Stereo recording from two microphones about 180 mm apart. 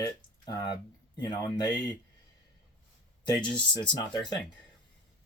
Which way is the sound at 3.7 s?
25° left (ahead or behind).